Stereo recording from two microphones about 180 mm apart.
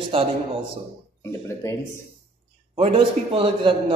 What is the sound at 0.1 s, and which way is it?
Speech, 30° right (ahead or behind).